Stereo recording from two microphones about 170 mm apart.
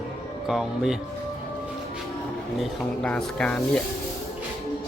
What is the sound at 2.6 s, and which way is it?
Speech, 5° left (ahead or behind).